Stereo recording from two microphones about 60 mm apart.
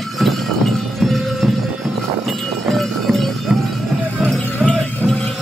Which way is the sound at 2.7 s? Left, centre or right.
Centre.